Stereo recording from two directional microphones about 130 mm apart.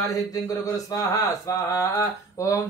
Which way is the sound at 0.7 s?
30° left (ahead or behind).